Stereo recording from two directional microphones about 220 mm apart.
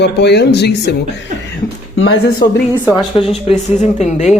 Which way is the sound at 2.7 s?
15° left (ahead or behind).